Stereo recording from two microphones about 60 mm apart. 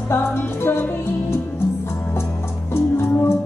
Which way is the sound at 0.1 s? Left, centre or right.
Left.